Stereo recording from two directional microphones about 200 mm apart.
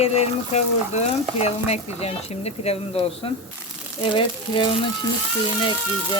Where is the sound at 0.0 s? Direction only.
35° left (ahead or behind).